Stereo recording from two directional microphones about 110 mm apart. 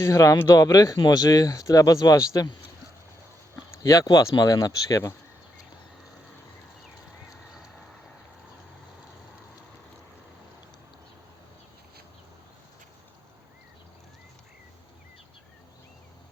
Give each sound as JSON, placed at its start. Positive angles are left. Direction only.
{"t": 0.0, "sound": "speech", "side_deg": 30}